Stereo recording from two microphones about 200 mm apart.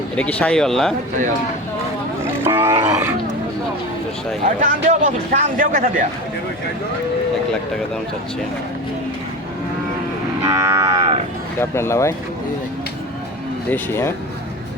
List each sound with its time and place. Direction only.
0.2 s speech: 5° left (ahead or behind)
2.2 s speech: 10° right (ahead or behind)
4.6 s speech: 35° right (ahead or behind)
10.4 s moo: 15° right (ahead or behind)
11.6 s speech: 10° left (ahead or behind)
13.7 s speech: 10° left (ahead or behind)